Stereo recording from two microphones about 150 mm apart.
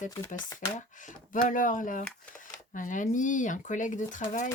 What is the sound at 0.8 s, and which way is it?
Speech, 60° left (ahead or behind).